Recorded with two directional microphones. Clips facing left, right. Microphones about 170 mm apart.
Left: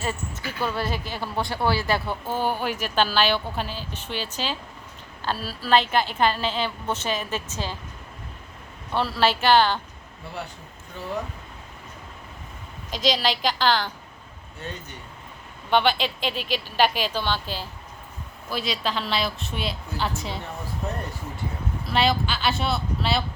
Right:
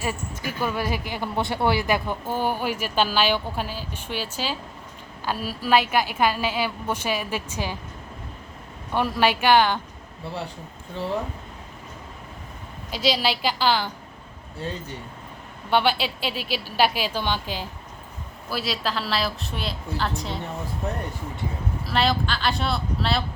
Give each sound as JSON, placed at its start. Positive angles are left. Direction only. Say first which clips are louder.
{"t": 0.0, "sound": "speech", "louder": "right 1 dB", "side_deg": -10}
{"t": 8.9, "sound": "speech", "louder": "right 1 dB", "side_deg": -15}
{"t": 12.9, "sound": "speech", "louder": "even", "side_deg": -10}
{"t": 14.6, "sound": "speech", "louder": "right 5 dB", "side_deg": -30}
{"t": 15.7, "sound": "speech", "louder": "even", "side_deg": -10}
{"t": 18.4, "sound": "a woman's voice", "louder": "even", "side_deg": -5}
{"t": 21.8, "sound": "a woman's voice", "louder": "even", "side_deg": 0}